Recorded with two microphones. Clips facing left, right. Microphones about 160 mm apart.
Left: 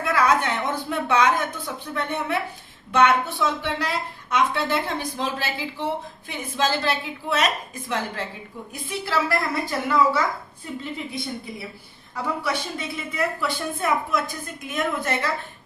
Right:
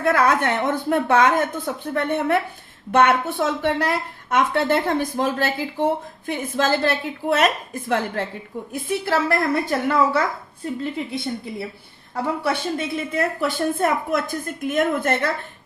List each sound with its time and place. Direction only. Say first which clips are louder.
0.0 s a woman's voice: right 3 dB; 55° right (ahead or behind)
12.1 s a woman's voice: right 4 dB; 55° right (ahead or behind)